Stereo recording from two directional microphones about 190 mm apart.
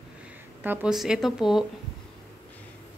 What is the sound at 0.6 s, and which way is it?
Speech, 10° right (ahead or behind).